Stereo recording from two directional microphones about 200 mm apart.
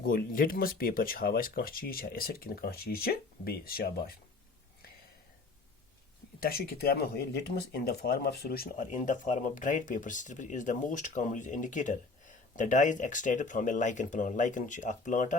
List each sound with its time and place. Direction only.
0.0 s speech: 45° left (ahead or behind)
6.4 s speech: 50° left (ahead or behind)